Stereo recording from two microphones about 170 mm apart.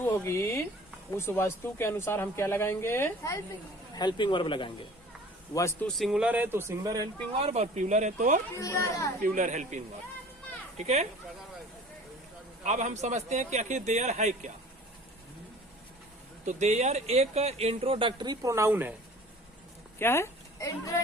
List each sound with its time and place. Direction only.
0.0 s speech: 15° left (ahead or behind)
3.9 s speech: 25° left (ahead or behind)
5.5 s speech: 15° left (ahead or behind)
6.0 s speech: 5° right (ahead or behind); by 7.1 s 20° right (ahead or behind)
7.3 s a man's voice: 40° right (ahead or behind)
8.5 s speech: 15° left (ahead or behind)
9.2 s a man's voice: 50° right (ahead or behind)
12.6 s a man's voice: 45° right (ahead or behind)
16.5 s speech: 45° right (ahead or behind); by 18.9 s 10° right (ahead or behind)
20.0 s speech: 15° left (ahead or behind)